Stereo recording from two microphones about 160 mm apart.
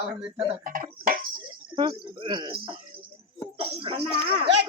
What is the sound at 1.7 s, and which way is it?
Speech, 30° right (ahead or behind).